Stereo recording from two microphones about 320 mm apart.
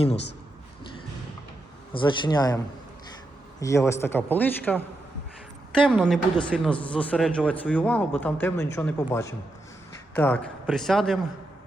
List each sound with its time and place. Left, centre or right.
1.9 s speech: centre
3.6 s speech: centre
5.8 s speech: centre